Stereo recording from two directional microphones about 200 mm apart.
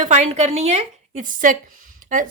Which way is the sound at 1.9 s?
40° right (ahead or behind).